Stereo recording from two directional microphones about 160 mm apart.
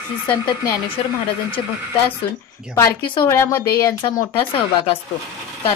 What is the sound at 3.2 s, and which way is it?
Speech, 15° left (ahead or behind).